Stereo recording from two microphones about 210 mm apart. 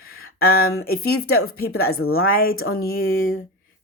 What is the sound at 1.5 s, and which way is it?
Speech, 45° left (ahead or behind).